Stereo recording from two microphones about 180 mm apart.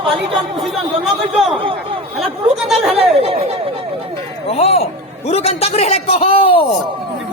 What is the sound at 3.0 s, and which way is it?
Speech, 35° right (ahead or behind).